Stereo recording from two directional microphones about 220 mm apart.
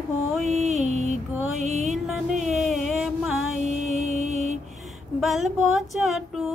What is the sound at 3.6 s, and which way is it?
Mantra, 30° right (ahead or behind).